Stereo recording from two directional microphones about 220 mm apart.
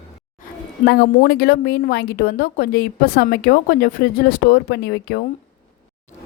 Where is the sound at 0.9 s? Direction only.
45° left (ahead or behind).